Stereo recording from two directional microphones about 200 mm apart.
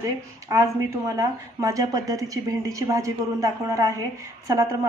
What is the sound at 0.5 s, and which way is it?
A woman's voice, 15° right (ahead or behind).